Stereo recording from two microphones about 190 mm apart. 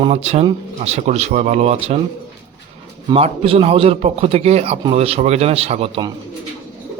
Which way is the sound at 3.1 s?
30° right (ahead or behind).